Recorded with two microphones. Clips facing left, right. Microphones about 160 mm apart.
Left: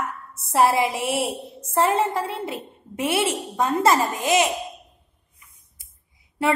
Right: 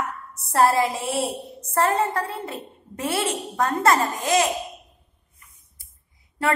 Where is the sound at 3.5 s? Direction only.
25° left (ahead or behind).